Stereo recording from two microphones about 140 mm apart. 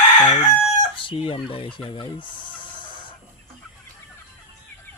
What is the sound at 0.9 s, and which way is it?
Speech, 35° left (ahead or behind).